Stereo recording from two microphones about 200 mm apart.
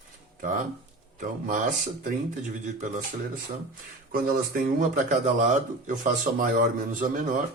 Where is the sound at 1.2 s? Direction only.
40° right (ahead or behind).